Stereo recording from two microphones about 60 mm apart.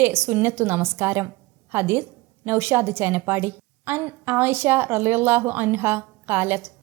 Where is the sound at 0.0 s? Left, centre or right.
Right.